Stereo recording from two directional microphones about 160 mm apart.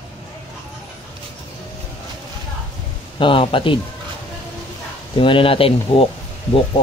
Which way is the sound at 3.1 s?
35° left (ahead or behind).